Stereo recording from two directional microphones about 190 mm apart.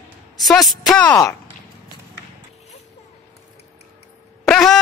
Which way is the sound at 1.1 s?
15° left (ahead or behind).